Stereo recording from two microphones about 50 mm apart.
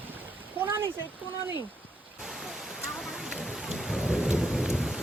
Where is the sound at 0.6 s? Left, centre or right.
Right.